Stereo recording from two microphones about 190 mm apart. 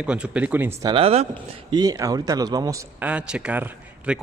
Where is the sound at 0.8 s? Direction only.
30° right (ahead or behind).